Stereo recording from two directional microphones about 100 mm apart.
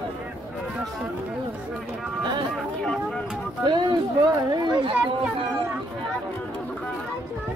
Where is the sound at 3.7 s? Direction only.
45° right (ahead or behind).